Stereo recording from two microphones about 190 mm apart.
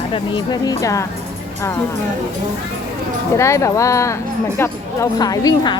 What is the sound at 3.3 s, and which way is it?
A woman's voice, 15° left (ahead or behind).